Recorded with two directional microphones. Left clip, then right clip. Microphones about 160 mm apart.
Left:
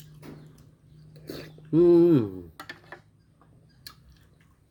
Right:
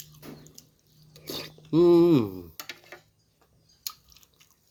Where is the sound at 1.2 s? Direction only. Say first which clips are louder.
Right 4 dB; 20° left (ahead or behind).